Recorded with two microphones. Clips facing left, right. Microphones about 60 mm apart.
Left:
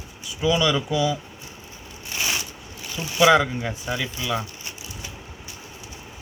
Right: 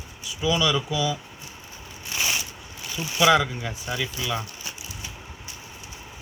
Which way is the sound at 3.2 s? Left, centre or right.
Centre.